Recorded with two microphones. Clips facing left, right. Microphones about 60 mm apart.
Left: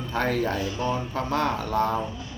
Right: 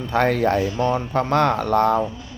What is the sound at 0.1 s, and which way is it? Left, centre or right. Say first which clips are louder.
Speech: right 7 dB; right.